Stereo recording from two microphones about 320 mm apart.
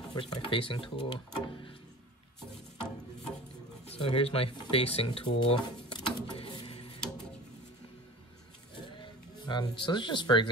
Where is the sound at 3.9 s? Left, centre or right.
Centre.